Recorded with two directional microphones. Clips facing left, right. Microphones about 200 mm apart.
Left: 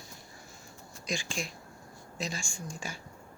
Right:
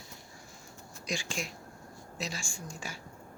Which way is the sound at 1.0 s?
50° left (ahead or behind).